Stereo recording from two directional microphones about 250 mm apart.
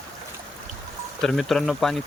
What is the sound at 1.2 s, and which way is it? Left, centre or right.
Speech, centre.